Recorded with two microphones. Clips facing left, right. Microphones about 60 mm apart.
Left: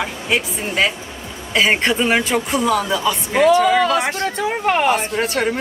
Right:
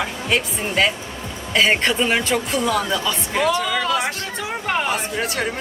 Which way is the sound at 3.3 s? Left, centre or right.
Left.